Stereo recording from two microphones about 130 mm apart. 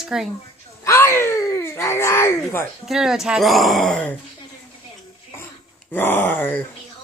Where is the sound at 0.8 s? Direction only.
20° left (ahead or behind).